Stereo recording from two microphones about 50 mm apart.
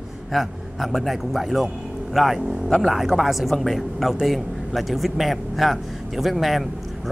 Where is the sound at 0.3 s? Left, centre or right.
Centre.